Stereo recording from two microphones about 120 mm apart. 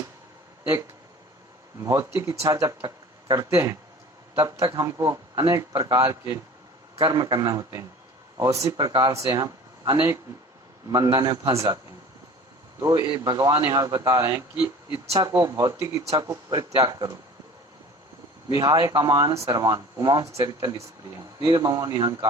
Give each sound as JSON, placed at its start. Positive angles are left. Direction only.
{"t": 1.8, "sound": "speech", "side_deg": -25}
{"t": 7.0, "sound": "speech", "side_deg": -30}
{"t": 12.8, "sound": "speech", "side_deg": -35}
{"t": 15.3, "sound": "speech", "side_deg": -25}
{"t": 18.5, "sound": "speech", "side_deg": -30}